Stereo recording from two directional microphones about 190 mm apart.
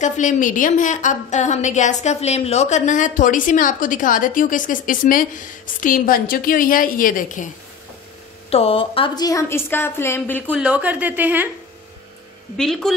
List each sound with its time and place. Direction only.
0.0 s a woman's voice: 40° left (ahead or behind)
8.5 s a woman's voice: 30° left (ahead or behind); by 10.4 s 10° left (ahead or behind)
10.4 s speech: 10° right (ahead or behind)
12.5 s a woman's voice: centre (ahead or behind)